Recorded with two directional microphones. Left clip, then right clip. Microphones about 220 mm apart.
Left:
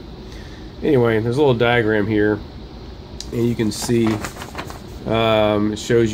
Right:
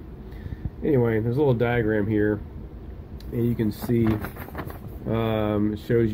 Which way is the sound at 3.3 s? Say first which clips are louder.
Left 6 dB; centre (ahead or behind).